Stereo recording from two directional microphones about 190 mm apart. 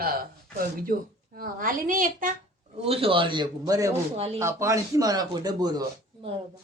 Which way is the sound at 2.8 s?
30° right (ahead or behind).